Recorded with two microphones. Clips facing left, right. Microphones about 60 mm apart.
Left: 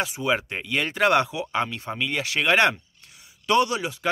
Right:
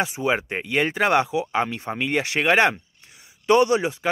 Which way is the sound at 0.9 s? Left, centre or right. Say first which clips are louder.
Left 1 dB; centre.